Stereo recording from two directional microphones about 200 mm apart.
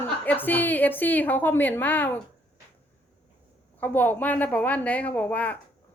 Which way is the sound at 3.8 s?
10° left (ahead or behind).